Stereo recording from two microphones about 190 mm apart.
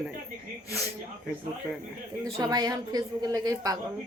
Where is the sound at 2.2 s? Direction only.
20° right (ahead or behind).